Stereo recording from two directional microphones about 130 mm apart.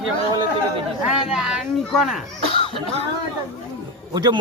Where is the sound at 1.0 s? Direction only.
5° right (ahead or behind).